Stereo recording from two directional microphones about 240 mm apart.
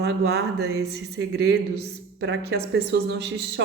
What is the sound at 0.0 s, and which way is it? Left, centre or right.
A woman's voice, right.